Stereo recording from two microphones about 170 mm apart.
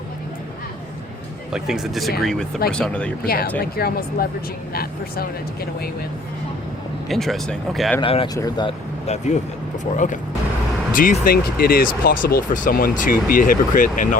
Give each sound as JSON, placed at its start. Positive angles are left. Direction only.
{"t": 1.5, "sound": "speech", "side_deg": -5}
{"t": 3.2, "sound": "speech", "side_deg": 60}
{"t": 7.1, "sound": "speech", "side_deg": 0}
{"t": 8.0, "sound": "speech", "side_deg": 30}
{"t": 9.0, "sound": "speech", "side_deg": 40}
{"t": 10.9, "sound": "speech", "side_deg": 55}